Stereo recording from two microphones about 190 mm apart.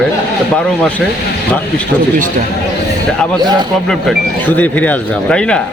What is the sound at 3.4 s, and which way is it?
Speech, 20° right (ahead or behind).